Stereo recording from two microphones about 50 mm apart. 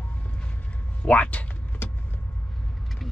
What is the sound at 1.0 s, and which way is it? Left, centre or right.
Speech, left.